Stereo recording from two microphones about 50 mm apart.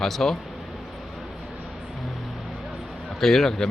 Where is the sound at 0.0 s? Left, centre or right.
Centre.